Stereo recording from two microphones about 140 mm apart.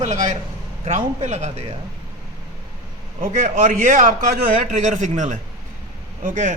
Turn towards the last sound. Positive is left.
turn(degrees=-65)  # may be behind; listen again after turning